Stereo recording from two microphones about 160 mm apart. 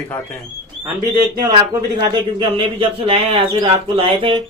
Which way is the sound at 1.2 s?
25° right (ahead or behind).